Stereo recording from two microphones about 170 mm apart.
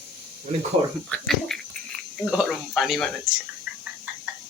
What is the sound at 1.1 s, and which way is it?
Speech, centre (ahead or behind).